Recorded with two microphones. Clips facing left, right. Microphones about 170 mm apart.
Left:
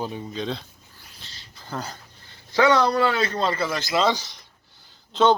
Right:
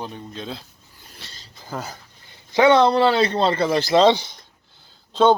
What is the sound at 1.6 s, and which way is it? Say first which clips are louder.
Speech: right 1 dB; 5° right (ahead or behind).